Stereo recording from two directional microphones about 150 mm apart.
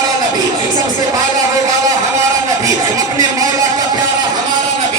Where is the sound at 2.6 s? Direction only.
20° right (ahead or behind).